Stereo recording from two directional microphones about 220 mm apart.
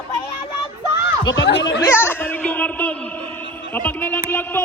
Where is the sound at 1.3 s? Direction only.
55° left (ahead or behind).